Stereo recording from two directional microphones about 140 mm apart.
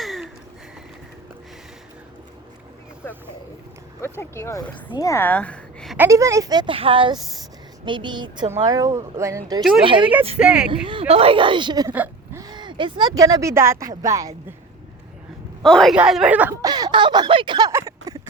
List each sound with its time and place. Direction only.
0.0 s a sound: centre (ahead or behind)
4.0 s a woman's voice: 20° left (ahead or behind)
6.0 s a woman's voice: 20° right (ahead or behind)
9.8 s speech: 35° right (ahead or behind)
10.3 s speech: 5° right (ahead or behind)
10.8 s speech: 40° right (ahead or behind)
11.9 s whimper: 15° right (ahead or behind)
12.4 s speech: 30° right (ahead or behind)
15.6 s speech: 5° left (ahead or behind)
16.6 s a sound: 25° right (ahead or behind)
17.7 s a sound: 20° right (ahead or behind)